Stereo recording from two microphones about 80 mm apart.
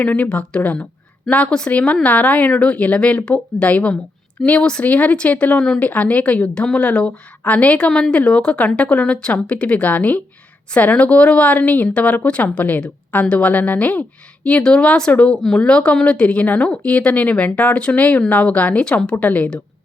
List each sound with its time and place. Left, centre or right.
0.0 s a woman's voice: centre
5.5 s speech: centre
5.8 s a woman's voice: centre